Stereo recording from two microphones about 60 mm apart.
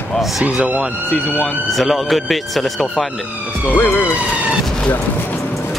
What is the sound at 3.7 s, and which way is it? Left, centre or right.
Speech, left.